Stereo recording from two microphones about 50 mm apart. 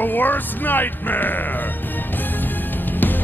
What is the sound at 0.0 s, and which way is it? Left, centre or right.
Music, left.